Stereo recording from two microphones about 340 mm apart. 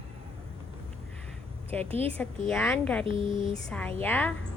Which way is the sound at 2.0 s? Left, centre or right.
Centre.